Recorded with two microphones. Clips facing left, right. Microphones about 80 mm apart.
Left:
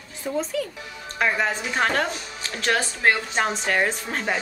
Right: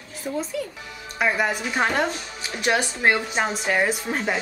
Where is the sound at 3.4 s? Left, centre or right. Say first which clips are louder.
Even; centre.